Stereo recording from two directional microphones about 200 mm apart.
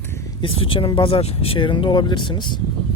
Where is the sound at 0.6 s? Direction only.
25° left (ahead or behind).